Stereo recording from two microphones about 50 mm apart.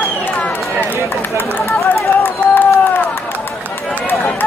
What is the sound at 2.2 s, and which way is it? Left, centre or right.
Run, left.